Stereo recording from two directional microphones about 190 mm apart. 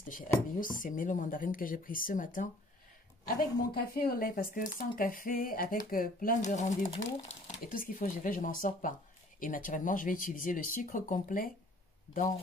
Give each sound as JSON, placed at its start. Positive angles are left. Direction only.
{"t": 0.6, "sound": "speech", "side_deg": 45}